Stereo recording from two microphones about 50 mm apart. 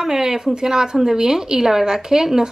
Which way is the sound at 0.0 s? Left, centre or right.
Centre.